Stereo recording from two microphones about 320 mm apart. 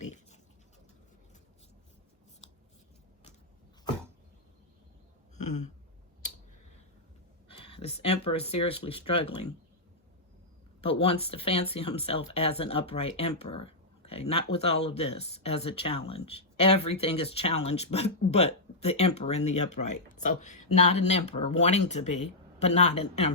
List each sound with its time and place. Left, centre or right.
5.4 s a sound: left
7.4 s speech: centre
10.8 s speech: centre
19.7 s speech: left
20.1 s speech: left